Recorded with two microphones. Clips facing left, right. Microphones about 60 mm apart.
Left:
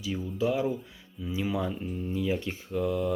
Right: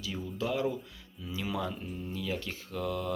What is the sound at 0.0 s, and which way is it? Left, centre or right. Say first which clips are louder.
Speech: left 6 dB; centre.